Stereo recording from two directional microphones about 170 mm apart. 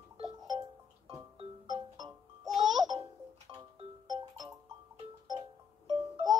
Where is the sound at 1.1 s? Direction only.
30° right (ahead or behind).